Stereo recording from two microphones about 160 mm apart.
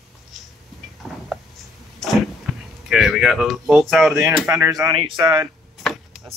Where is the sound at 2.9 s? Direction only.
Centre (ahead or behind).